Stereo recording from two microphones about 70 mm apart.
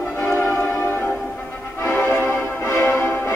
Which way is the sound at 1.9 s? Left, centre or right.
Left.